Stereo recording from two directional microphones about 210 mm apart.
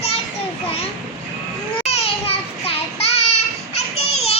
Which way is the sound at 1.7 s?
30° left (ahead or behind).